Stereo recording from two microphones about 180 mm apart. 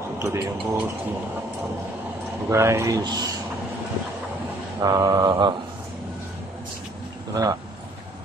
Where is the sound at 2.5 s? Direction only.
15° right (ahead or behind).